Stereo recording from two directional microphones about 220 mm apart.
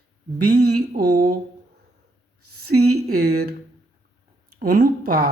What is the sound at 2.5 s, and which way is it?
Speech, 90° right.